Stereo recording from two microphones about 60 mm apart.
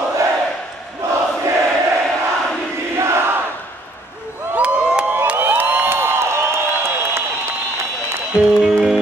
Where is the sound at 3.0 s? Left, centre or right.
Right.